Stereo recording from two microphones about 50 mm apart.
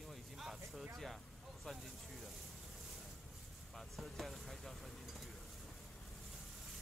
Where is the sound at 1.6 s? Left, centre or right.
Centre.